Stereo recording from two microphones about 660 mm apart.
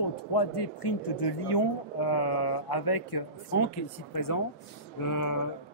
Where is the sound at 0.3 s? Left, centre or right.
Left.